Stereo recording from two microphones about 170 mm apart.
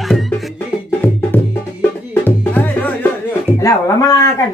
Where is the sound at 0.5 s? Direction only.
10° left (ahead or behind).